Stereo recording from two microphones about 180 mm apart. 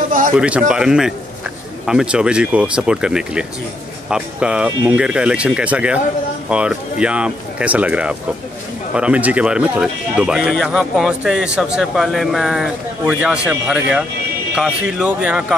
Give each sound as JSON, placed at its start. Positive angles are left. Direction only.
{"t": 0.4, "sound": "speech", "side_deg": -5}